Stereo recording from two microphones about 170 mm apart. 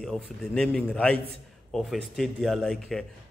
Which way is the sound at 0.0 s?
5° left (ahead or behind).